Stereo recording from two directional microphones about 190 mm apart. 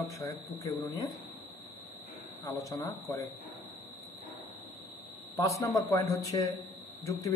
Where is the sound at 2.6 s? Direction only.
15° left (ahead or behind).